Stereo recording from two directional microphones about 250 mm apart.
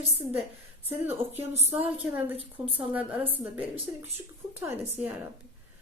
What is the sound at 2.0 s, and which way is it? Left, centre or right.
A woman's voice, centre.